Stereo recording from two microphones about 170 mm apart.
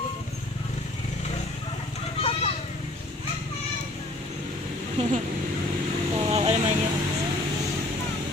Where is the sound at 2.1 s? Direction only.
35° left (ahead or behind).